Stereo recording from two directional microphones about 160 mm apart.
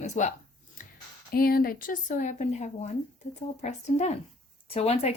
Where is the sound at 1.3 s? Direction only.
70° left (ahead or behind).